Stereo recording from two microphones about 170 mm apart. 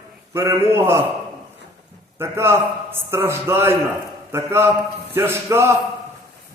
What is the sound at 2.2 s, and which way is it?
A man's voice, 15° right (ahead or behind).